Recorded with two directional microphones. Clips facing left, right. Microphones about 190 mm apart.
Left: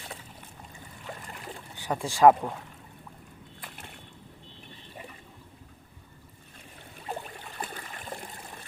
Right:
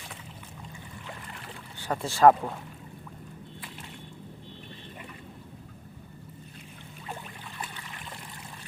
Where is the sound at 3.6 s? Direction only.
55° left (ahead or behind).